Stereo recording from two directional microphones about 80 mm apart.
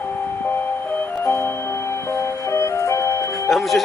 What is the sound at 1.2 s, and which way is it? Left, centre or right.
Music, left.